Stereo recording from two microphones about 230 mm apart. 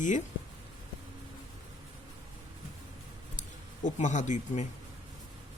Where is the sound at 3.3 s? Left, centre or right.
Left.